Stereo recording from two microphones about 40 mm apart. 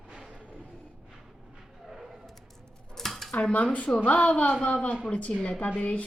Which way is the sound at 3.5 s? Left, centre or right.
Left.